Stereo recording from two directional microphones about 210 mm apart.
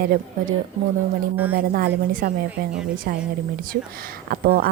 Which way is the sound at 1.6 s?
45° right (ahead or behind).